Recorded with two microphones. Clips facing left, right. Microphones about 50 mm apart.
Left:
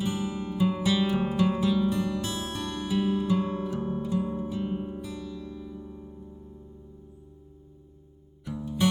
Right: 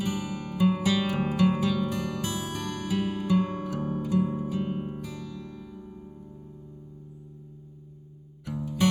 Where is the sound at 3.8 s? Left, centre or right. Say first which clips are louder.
Even; centre.